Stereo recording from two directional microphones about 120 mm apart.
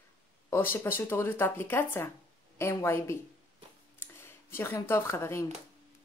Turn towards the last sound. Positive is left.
turn(degrees=25)  # may be behind; listen again after turning